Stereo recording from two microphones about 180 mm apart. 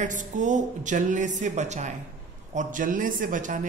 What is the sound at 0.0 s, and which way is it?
Speech, 45° right (ahead or behind).